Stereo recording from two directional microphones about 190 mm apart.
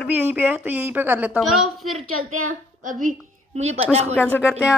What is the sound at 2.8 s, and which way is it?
A woman's voice, 45° right (ahead or behind).